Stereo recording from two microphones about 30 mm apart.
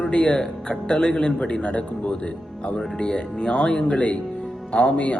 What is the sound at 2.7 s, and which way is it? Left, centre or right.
Speech, left.